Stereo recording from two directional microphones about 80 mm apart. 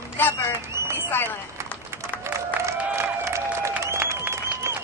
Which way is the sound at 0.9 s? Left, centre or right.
Left.